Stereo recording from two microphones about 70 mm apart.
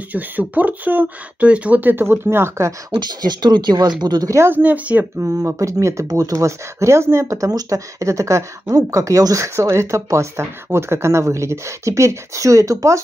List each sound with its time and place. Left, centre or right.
0.1 s speech: right
2.9 s speech: right
4.0 s speech: right
4.5 s speech: right
5.5 s speech: right